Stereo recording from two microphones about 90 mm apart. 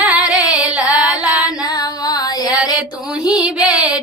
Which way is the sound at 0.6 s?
15° right (ahead or behind).